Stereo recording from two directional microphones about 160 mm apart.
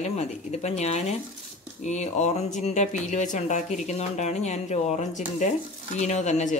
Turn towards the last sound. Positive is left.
turn(degrees=50)  # may be behind; listen again after turning